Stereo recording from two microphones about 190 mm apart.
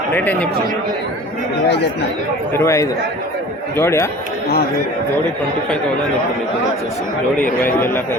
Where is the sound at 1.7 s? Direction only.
60° left (ahead or behind).